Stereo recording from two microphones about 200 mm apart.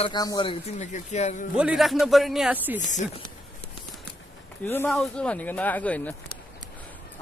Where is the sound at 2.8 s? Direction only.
40° left (ahead or behind).